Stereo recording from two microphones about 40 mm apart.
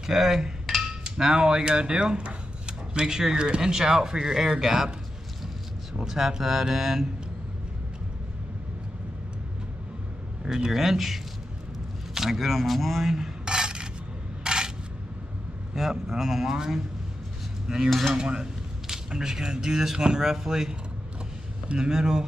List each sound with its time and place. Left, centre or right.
0.0 s speech: centre
5.9 s speech: centre
10.4 s speech: centre
13.1 s cutlery: centre
14.4 s coin: centre
15.7 s speech: centre
17.8 s speech: centre
18.1 s speech: centre
21.7 s speech: centre